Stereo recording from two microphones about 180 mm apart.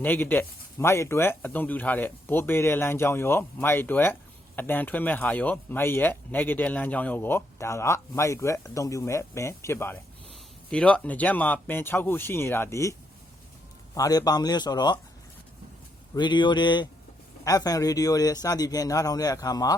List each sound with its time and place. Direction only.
0.0 s speech: 10° left (ahead or behind)
16.1 s speech: 25° left (ahead or behind)